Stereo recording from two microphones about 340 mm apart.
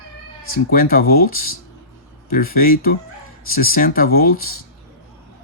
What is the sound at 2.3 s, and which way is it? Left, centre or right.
Speech, left.